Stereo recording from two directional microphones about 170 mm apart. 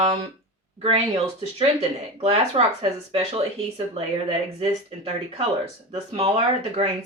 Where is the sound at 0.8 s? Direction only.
35° right (ahead or behind).